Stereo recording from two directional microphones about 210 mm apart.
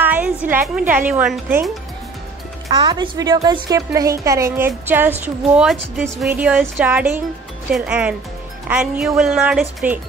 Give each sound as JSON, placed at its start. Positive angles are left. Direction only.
{"t": 0.0, "sound": "a woman's voice", "side_deg": -10}
{"t": 2.8, "sound": "speech", "side_deg": -20}